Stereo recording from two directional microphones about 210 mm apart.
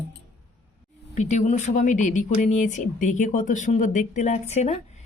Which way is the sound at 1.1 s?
35° left (ahead or behind).